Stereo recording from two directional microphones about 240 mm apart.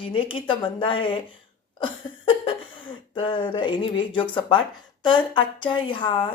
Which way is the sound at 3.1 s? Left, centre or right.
Left.